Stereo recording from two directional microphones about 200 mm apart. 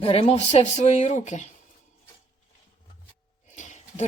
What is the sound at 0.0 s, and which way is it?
Speech, 30° left (ahead or behind).